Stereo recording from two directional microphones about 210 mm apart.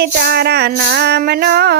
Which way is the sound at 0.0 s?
50° right (ahead or behind).